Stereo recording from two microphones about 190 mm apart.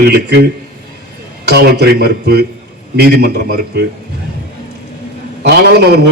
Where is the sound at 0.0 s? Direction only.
55° right (ahead or behind).